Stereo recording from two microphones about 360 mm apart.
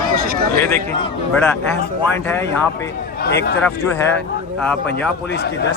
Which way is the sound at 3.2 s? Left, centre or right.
Left.